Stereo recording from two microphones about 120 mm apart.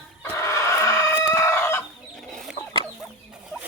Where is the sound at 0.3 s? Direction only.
25° left (ahead or behind).